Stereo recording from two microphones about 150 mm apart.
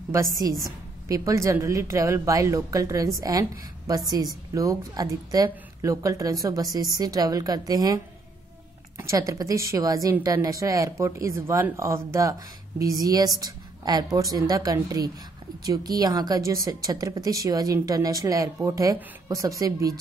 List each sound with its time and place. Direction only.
0.1 s speech: 20° right (ahead or behind)